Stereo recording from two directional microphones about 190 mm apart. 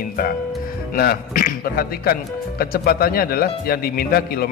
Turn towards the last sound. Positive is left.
turn(degrees=55)  # may be behind; listen again after turning